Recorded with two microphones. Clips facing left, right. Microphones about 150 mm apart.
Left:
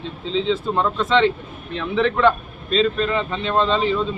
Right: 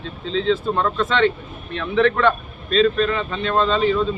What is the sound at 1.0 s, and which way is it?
A man's voice, 25° left (ahead or behind).